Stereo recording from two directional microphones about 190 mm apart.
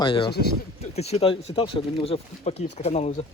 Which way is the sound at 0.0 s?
25° left (ahead or behind).